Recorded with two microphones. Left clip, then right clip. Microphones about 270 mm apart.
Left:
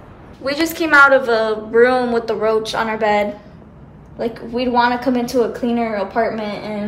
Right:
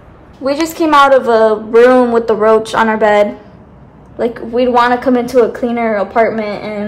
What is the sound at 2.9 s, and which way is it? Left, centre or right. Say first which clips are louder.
Speech: right 7 dB; right.